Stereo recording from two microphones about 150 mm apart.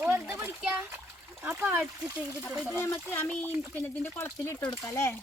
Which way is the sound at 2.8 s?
15° left (ahead or behind).